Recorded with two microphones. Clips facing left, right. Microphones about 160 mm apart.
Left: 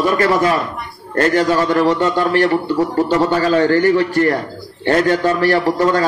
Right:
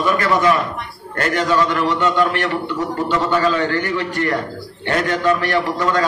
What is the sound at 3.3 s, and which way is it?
A man's voice, 35° left (ahead or behind).